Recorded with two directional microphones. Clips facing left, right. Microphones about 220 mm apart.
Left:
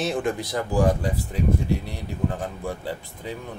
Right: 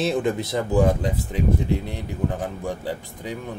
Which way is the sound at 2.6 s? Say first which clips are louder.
Right 2 dB; 15° right (ahead or behind).